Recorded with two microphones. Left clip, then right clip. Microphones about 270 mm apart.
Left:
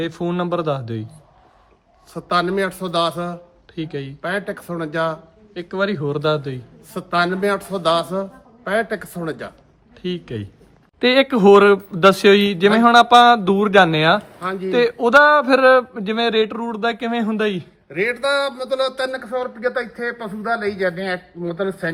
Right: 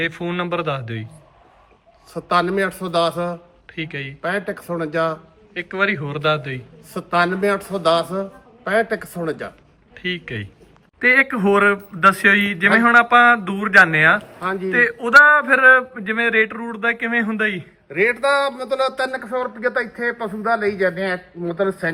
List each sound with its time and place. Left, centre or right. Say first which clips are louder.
0.2 s speech: left 1 dB; centre
2.1 s a man's voice: right 1 dB; centre
5.5 s speech: right 2 dB; centre
6.9 s a man's voice: right 1 dB; centre
10.0 s speech: right 2 dB; centre
14.3 s a man's voice: right 1 dB; centre
14.7 s speech: right 1 dB; centre
17.8 s a man's voice: right 3 dB; centre